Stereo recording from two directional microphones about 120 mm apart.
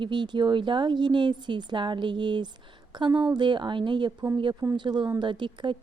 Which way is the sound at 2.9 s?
40° right (ahead or behind).